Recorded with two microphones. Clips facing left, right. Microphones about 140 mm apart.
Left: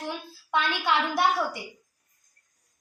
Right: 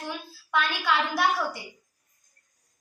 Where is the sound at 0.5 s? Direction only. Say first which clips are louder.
Even; 20° left (ahead or behind).